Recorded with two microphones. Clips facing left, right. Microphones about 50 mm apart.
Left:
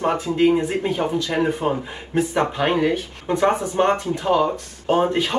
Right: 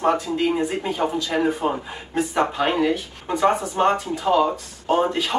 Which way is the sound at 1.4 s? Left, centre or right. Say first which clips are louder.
Even; centre.